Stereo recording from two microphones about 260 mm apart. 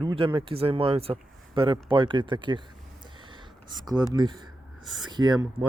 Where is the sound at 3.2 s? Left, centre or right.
Centre.